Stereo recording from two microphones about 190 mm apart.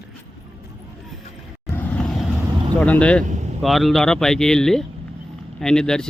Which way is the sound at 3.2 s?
40° right (ahead or behind).